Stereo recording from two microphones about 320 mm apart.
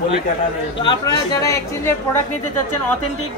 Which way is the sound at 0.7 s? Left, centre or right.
Centre.